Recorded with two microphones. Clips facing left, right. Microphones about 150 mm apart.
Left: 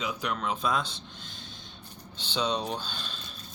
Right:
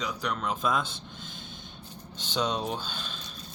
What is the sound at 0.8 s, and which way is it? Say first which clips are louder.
Speech: right 1 dB; 50° right (ahead or behind).